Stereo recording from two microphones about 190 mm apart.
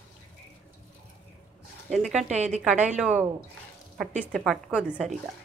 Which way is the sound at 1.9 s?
Centre (ahead or behind).